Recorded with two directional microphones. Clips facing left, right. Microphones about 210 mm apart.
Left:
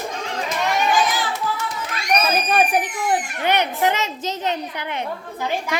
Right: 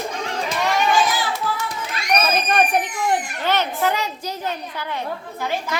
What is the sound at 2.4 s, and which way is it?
A child's voice, 5° left (ahead or behind).